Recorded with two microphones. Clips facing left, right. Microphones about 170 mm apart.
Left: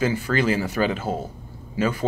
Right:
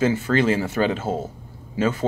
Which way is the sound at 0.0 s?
25° right (ahead or behind).